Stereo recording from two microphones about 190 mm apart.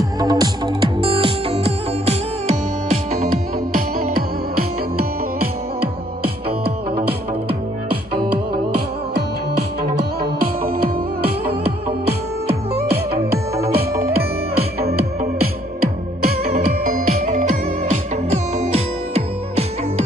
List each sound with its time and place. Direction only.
0.2 s music: 20° right (ahead or behind)
7.0 s music: 55° right (ahead or behind)
11.6 s music: 55° right (ahead or behind)
17.8 s music: 35° right (ahead or behind)